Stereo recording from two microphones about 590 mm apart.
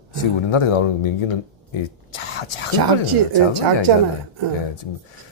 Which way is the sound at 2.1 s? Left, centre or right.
Left.